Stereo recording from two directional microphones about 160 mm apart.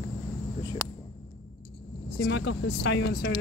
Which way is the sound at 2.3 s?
90° left.